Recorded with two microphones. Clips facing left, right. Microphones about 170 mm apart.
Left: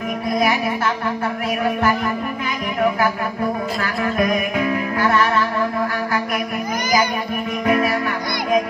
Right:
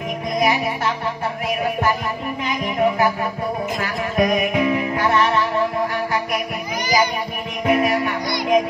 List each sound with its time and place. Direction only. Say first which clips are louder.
3.8 s music: even; 20° right (ahead or behind)
7.6 s music: right 1 dB; 20° right (ahead or behind)